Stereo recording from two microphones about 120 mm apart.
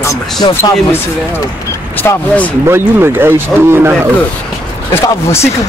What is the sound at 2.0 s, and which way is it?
Speech, 15° left (ahead or behind).